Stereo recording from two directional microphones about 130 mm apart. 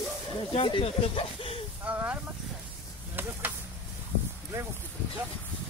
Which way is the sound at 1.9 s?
10° right (ahead or behind).